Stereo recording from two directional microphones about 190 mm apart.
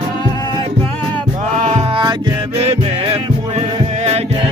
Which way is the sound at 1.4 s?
40° right (ahead or behind).